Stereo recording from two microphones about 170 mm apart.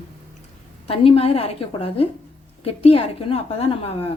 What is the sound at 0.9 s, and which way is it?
A woman's voice, 35° left (ahead or behind).